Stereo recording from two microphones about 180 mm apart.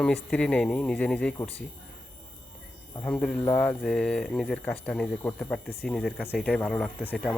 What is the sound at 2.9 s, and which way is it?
A man's voice, 10° left (ahead or behind).